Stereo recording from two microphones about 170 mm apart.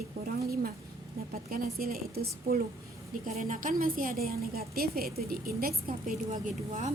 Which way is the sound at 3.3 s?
45° right (ahead or behind).